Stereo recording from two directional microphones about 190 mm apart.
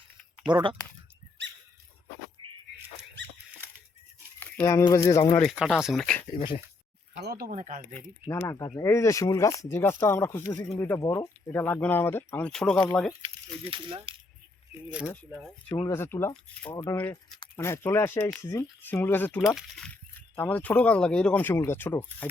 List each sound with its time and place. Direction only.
0.5 s speech: 25° right (ahead or behind)
4.4 s speech: 10° left (ahead or behind)
5.4 s speech: centre (ahead or behind)
7.3 s speech: 50° right (ahead or behind)
7.9 s speech: 15° left (ahead or behind)
13.2 s speech: 30° right (ahead or behind)
14.8 s speech: 5° right (ahead or behind)
15.1 s speech: 10° left (ahead or behind)
19.5 s speech: centre (ahead or behind)